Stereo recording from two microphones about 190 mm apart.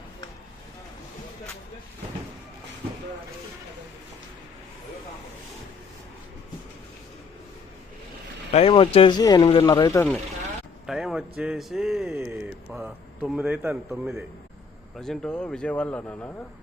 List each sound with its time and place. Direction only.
8.5 s speech: 30° left (ahead or behind)
10.8 s speech: centre (ahead or behind)